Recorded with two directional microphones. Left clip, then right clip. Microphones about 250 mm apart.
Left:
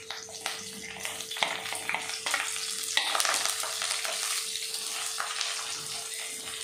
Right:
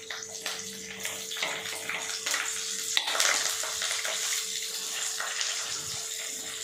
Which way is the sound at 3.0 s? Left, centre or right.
Right.